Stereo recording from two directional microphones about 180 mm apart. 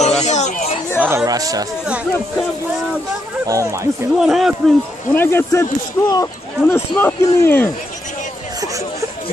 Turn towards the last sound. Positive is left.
turn(degrees=10)  # may be behind; listen again after turning